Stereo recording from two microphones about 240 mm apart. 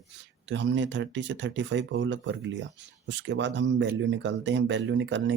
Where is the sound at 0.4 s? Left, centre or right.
Right.